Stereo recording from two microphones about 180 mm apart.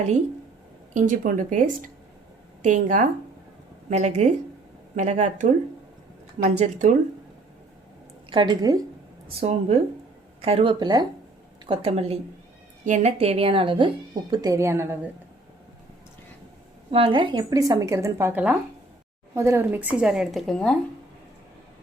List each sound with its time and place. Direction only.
0.9 s speech: 45° right (ahead or behind)
8.3 s a woman's voice: 25° right (ahead or behind)
9.4 s a woman's voice: 35° right (ahead or behind); by 14.9 s 15° right (ahead or behind)
16.9 s a woman's voice: 30° right (ahead or behind); by 20.7 s 5° left (ahead or behind)